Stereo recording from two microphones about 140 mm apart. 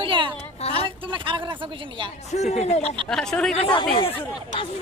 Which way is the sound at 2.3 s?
55° left (ahead or behind).